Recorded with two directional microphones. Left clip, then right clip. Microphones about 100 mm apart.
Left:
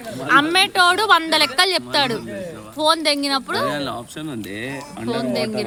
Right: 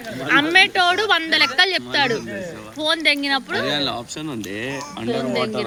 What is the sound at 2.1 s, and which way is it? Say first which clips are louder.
Speech: right 1 dB; 20° left (ahead or behind).